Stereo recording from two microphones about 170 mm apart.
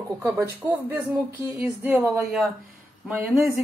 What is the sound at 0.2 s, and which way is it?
Speech, 15° right (ahead or behind).